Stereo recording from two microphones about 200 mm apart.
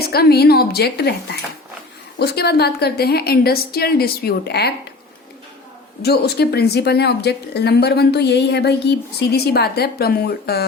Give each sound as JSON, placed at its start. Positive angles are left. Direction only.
{"t": 0.0, "sound": "speech", "side_deg": 50}
{"t": 6.0, "sound": "speech", "side_deg": 55}